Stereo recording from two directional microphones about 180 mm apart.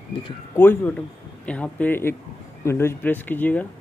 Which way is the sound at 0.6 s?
10° left (ahead or behind).